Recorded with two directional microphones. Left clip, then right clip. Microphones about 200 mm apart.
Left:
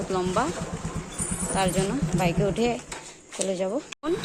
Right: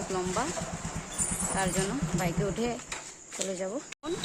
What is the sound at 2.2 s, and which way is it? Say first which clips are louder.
Speech: left 8 dB; 5° right (ahead or behind).